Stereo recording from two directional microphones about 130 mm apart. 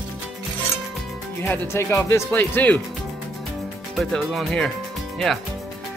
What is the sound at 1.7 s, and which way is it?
Speech, 20° left (ahead or behind).